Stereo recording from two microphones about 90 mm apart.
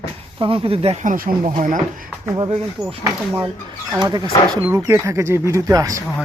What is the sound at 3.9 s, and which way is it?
Speech, 50° right (ahead or behind).